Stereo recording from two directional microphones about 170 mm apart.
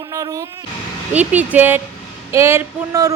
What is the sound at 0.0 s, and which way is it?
Music, 20° right (ahead or behind).